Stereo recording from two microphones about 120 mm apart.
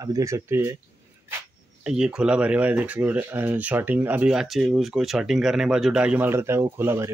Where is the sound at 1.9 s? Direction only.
5° right (ahead or behind).